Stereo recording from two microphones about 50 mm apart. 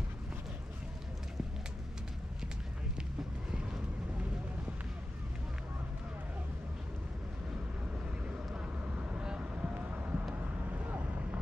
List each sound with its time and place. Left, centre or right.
8.5 s vehicle: right